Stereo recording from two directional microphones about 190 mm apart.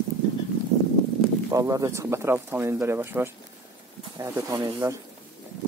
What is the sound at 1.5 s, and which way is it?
Speech, 15° right (ahead or behind).